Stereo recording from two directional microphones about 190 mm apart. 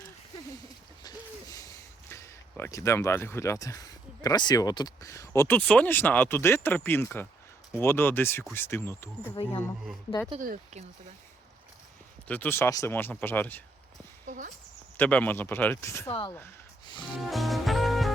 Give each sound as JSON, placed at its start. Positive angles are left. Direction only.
{"t": 1.0, "sound": "speech", "side_deg": 20}
{"t": 10.4, "sound": "speech", "side_deg": -40}
{"t": 12.3, "sound": "speech", "side_deg": 10}
{"t": 14.3, "sound": "speech", "side_deg": -45}
{"t": 14.9, "sound": "speech", "side_deg": 10}
{"t": 17.2, "sound": "music", "side_deg": 0}